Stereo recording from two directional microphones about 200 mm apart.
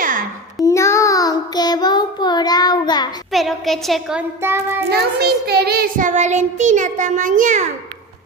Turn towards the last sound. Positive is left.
turn(degrees=-40)  # may be behind; listen again after turning